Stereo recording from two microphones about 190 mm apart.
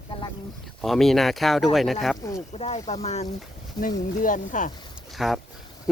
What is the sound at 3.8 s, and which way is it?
Speech, 20° left (ahead or behind).